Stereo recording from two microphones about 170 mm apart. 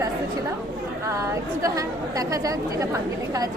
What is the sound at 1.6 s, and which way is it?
Speech, 20° right (ahead or behind).